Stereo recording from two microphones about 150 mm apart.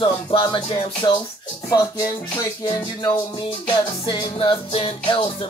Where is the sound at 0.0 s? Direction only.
35° left (ahead or behind).